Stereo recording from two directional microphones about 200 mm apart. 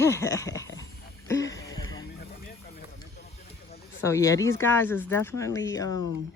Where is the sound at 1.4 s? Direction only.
15° left (ahead or behind).